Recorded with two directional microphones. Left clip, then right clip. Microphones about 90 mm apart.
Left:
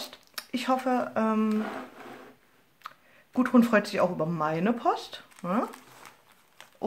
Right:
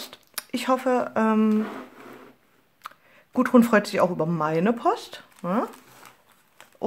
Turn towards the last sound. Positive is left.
turn(degrees=-30)  # may be behind; listen again after turning